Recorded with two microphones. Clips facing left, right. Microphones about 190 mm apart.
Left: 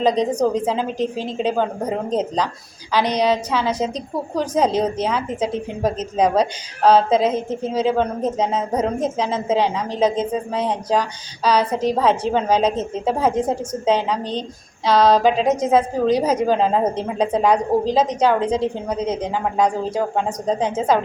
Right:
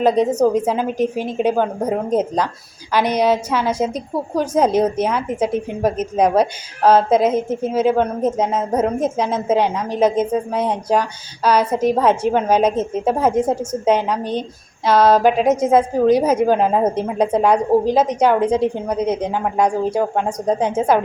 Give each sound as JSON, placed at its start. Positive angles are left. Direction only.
{"t": 0.0, "sound": "a woman's voice", "side_deg": -5}